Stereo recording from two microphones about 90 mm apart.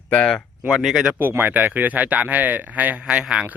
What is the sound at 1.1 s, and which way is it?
Speech, 25° right (ahead or behind).